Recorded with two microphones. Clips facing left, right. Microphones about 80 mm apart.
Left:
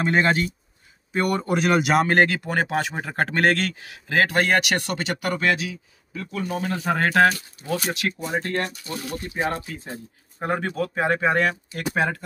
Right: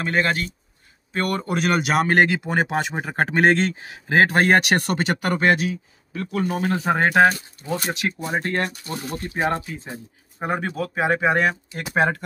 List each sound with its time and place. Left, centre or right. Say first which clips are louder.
0.0 s speech: left 2 dB; left
1.1 s speech: left 1 dB; centre; by 6.8 s right
6.8 s speech: right 2 dB; right
8.2 s speech: right 2 dB; right
8.9 s speech: right 1 dB; right
10.4 s speech: even; centre
11.9 s speech: right 4 dB; right